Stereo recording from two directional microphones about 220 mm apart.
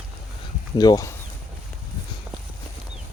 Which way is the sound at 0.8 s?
15° left (ahead or behind).